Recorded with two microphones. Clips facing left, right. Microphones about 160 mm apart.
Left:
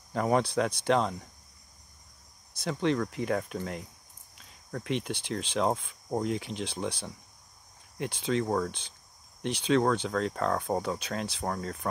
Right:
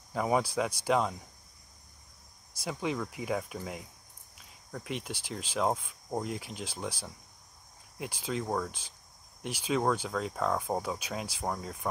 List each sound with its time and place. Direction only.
0.1 s speech: 5° right (ahead or behind)
2.5 s speech: 5° right (ahead or behind)